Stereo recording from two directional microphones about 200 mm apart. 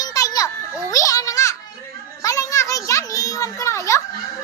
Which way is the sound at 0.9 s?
15° left (ahead or behind).